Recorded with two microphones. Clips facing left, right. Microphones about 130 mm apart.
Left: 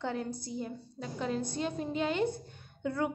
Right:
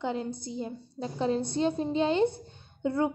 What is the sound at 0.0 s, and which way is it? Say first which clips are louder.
A woman's voice: right 3 dB; 20° right (ahead or behind).